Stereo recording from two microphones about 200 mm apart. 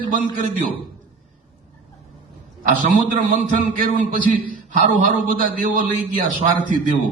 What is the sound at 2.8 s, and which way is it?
A man's voice, 40° right (ahead or behind).